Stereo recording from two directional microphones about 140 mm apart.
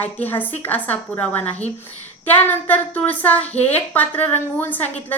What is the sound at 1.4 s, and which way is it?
Speech, 50° left (ahead or behind).